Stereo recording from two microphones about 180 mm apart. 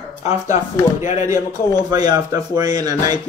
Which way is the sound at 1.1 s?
15° right (ahead or behind).